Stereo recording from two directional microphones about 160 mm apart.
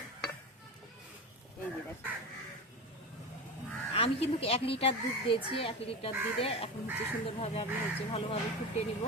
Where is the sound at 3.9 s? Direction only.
40° left (ahead or behind).